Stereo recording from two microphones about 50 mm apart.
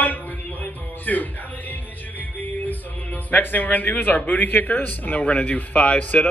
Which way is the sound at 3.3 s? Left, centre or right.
Left.